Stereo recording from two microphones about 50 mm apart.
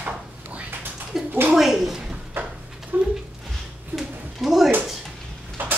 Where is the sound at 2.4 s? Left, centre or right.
Right.